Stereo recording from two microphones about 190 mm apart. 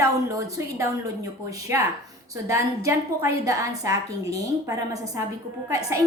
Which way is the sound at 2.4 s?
15° right (ahead or behind).